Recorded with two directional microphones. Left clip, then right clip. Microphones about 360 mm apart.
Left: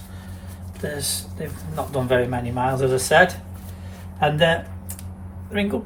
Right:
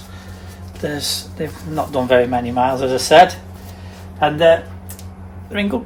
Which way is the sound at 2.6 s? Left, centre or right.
Centre.